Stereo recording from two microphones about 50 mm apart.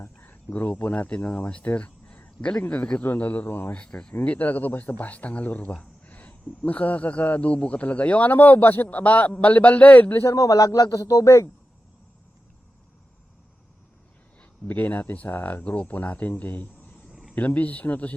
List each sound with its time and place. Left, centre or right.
0.6 s a man's voice: left
3.8 s speech: centre
4.2 s a man's voice: left
10.2 s speech: left
14.7 s a man's voice: left
15.6 s a man's voice: left
17.1 s a sound: centre
17.3 s a man's voice: left